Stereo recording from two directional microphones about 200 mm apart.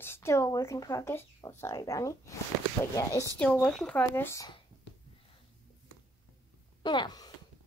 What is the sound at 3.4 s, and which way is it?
Speech, 5° left (ahead or behind).